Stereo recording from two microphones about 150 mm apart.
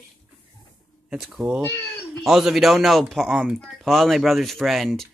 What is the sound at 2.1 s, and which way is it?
Speech, centre (ahead or behind).